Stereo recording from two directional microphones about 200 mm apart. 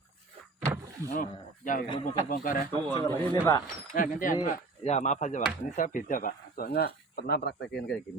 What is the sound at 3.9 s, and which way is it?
Speech, 40° left (ahead or behind).